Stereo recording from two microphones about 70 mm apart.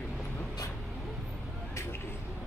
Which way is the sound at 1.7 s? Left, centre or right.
Left.